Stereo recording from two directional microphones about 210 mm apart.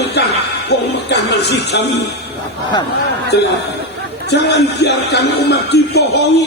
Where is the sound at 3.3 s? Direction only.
50° left (ahead or behind).